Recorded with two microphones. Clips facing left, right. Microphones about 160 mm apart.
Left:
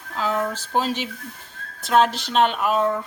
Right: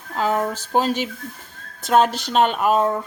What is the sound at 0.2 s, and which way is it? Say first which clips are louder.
A woman's voice: right 3 dB; 45° right (ahead or behind).